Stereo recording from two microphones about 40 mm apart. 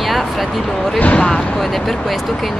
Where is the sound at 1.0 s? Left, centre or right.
Left.